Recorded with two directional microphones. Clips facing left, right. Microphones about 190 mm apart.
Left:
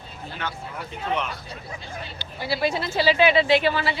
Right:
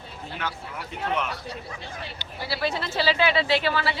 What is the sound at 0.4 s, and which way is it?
Speech, 10° right (ahead or behind).